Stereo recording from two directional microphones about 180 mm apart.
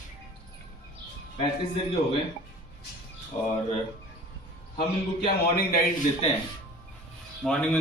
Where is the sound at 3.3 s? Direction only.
35° left (ahead or behind).